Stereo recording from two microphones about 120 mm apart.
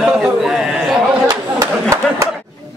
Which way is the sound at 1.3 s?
25° right (ahead or behind).